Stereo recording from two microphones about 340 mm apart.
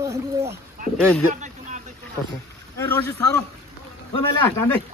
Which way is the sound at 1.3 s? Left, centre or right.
Right.